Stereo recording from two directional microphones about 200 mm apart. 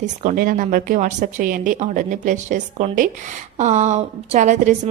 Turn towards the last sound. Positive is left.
turn(degrees=-35)  # may be behind; listen again after turning